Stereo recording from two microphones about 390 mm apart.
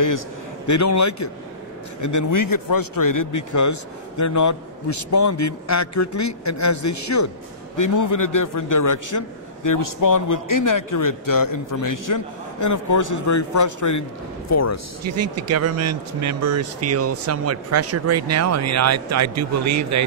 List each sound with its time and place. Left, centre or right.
0.7 s a man's voice: left
15.0 s speech: right